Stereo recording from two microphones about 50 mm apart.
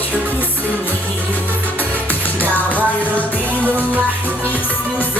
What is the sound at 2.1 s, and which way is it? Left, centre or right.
Music, left.